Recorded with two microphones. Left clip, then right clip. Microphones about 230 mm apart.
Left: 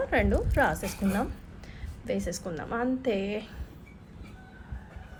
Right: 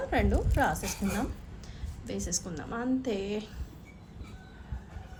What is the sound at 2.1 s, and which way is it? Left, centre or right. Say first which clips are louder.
A woman's voice: left 4 dB; left.